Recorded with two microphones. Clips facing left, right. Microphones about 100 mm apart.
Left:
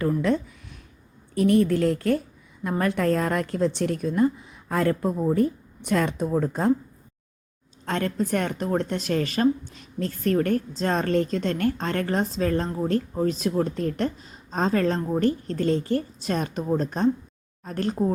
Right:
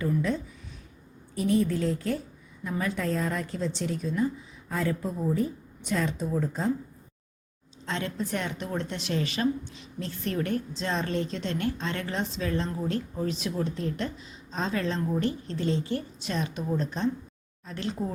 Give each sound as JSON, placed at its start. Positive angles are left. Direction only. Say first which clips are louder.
{"t": 0.0, "sound": "a sound", "louder": "left 5 dB", "side_deg": 65}
{"t": 1.4, "sound": "a woman's voice", "louder": "left 6 dB", "side_deg": 65}
{"t": 7.9, "sound": "a woman's voice", "louder": "left 6 dB", "side_deg": 50}